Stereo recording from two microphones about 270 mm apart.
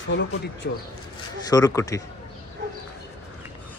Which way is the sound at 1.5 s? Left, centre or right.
Centre.